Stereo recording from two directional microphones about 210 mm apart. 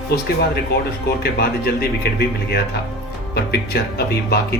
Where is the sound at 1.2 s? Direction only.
50° left (ahead or behind).